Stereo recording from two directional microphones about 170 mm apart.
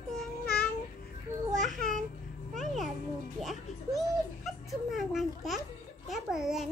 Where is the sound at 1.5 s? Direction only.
Centre (ahead or behind).